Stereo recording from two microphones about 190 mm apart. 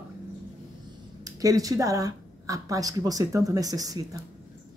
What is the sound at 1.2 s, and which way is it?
Speech, 20° right (ahead or behind).